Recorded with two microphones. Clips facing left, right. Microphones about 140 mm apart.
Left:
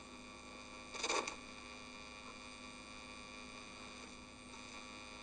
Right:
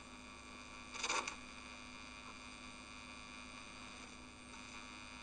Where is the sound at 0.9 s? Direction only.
30° left (ahead or behind).